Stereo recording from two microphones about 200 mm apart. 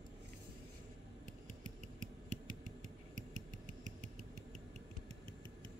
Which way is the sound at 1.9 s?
40° right (ahead or behind).